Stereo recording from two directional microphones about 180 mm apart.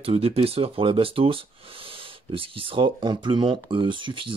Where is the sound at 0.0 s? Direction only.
35° right (ahead or behind).